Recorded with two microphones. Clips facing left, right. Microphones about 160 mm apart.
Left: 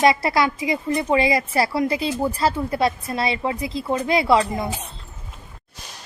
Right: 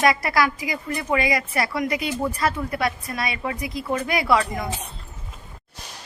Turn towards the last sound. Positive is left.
turn(degrees=25)  # may be behind; listen again after turning